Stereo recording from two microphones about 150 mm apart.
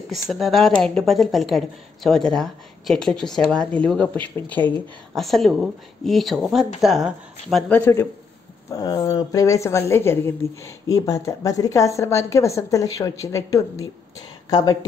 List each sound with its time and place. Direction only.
0.1 s speech: centre (ahead or behind)
5.2 s speech: centre (ahead or behind)
7.7 s a man's voice: 15° left (ahead or behind)